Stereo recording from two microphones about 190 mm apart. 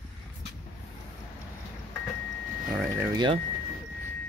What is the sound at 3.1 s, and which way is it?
Speech, 25° right (ahead or behind).